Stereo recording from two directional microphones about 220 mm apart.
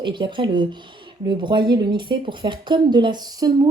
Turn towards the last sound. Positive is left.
turn(degrees=-20)  # may be behind; listen again after turning